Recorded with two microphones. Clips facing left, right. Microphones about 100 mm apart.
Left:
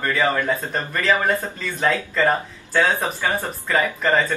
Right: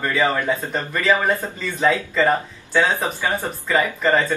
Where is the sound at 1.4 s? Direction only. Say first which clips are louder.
Right 2 dB; 10° right (ahead or behind).